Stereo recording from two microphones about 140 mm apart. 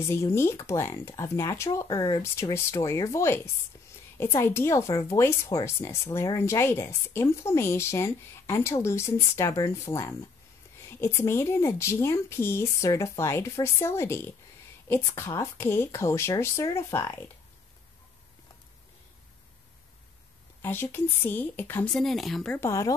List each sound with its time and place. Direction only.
0.0 s speech: 20° left (ahead or behind)
20.6 s a woman's voice: 15° left (ahead or behind)
21.9 s speech: centre (ahead or behind)
22.6 s speech: 20° left (ahead or behind)